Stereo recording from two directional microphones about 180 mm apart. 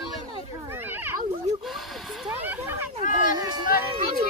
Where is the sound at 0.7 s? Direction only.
10° right (ahead or behind).